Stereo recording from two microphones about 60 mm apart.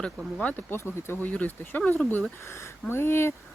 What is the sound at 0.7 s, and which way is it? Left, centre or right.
Speech, left.